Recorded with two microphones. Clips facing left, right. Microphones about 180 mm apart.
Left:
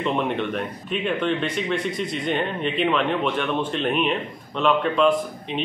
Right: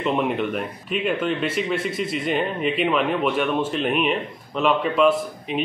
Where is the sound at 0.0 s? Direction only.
5° right (ahead or behind).